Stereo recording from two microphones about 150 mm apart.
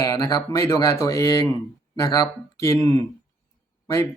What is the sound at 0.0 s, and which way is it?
Speech, 25° left (ahead or behind).